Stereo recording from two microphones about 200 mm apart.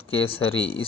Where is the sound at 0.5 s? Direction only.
30° left (ahead or behind).